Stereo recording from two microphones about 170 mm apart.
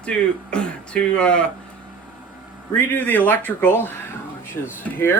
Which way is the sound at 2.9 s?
10° left (ahead or behind).